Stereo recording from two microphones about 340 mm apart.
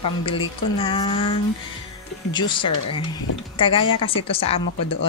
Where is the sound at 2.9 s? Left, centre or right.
Left.